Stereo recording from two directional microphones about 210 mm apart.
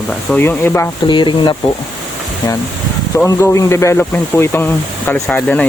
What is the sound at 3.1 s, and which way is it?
Speech, 15° left (ahead or behind).